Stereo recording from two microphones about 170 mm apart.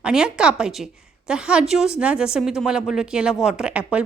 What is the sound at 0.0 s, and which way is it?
Speech, 5° right (ahead or behind).